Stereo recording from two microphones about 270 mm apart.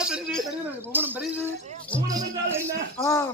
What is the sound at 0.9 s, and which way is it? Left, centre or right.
A man's voice, centre.